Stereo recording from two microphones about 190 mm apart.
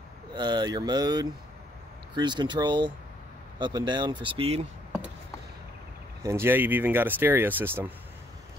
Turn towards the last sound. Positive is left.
turn(degrees=-10)  # may be behind; listen again after turning